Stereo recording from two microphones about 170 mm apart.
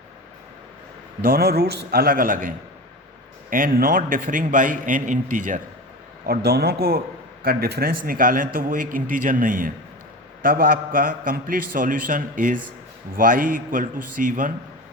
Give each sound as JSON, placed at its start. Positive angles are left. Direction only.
{"t": 1.2, "sound": "a man's voice", "side_deg": -60}
{"t": 3.5, "sound": "a man's voice", "side_deg": -55}
{"t": 6.2, "sound": "a man's voice", "side_deg": -65}